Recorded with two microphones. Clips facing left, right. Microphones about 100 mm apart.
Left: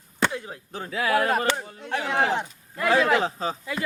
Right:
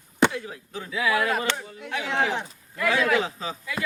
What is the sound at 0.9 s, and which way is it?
Speech, 45° left (ahead or behind).